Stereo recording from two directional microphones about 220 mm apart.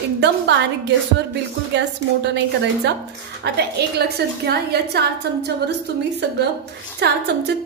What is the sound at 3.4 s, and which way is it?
A woman's voice, 50° right (ahead or behind).